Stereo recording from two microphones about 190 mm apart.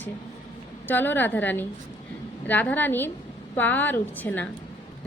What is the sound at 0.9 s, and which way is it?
A woman's voice, 10° left (ahead or behind).